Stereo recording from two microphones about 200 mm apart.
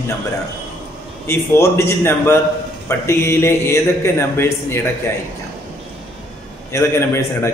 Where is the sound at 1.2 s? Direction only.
15° left (ahead or behind).